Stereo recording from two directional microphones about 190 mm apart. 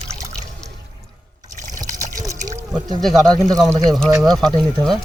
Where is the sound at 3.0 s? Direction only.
Centre (ahead or behind).